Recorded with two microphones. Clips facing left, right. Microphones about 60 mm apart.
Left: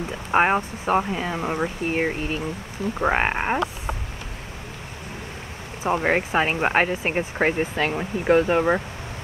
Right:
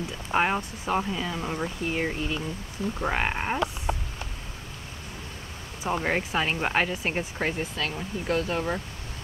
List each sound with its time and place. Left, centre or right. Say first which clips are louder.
0.1 s speech: left 6 dB; left
5.9 s speech: left 5 dB; left